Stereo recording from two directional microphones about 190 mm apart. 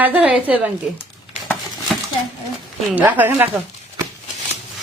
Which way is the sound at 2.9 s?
10° right (ahead or behind).